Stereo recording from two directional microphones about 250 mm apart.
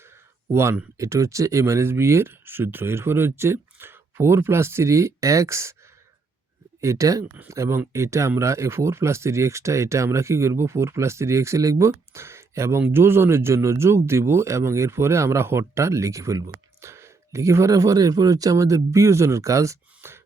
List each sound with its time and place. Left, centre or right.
0.0 s speech: centre
6.8 s speech: centre